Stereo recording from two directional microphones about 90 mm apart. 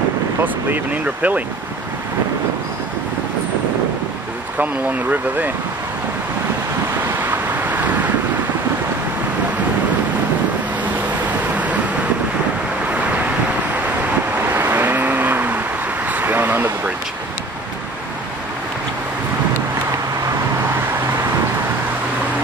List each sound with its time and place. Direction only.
1.0 s speech: 15° right (ahead or behind)
7.0 s vehicle: 20° right (ahead or behind)
11.5 s vehicle: 15° right (ahead or behind)
12.8 s waves: 15° right (ahead or behind)
14.5 s vehicle: 25° right (ahead or behind)
16.1 s a sound: 20° right (ahead or behind)